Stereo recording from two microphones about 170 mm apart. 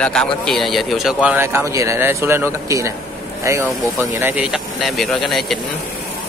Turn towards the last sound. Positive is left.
turn(degrees=0)  # may be behind; listen again after turning